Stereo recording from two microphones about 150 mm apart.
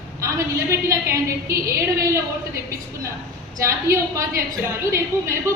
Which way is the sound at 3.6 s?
20° right (ahead or behind).